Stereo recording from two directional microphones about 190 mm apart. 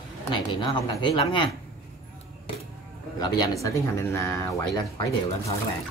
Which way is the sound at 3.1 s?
20° left (ahead or behind).